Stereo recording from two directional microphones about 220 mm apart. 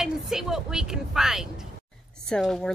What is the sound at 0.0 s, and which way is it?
Speech, centre (ahead or behind).